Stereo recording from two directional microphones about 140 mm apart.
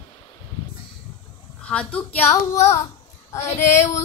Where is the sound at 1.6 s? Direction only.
10° left (ahead or behind).